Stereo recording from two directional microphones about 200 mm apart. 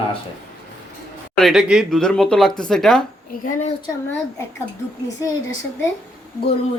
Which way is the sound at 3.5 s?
35° left (ahead or behind).